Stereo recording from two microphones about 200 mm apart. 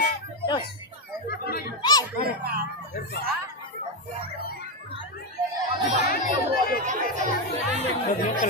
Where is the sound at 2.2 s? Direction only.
50° right (ahead or behind).